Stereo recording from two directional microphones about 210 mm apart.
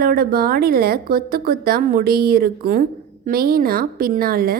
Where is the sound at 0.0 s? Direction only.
45° right (ahead or behind).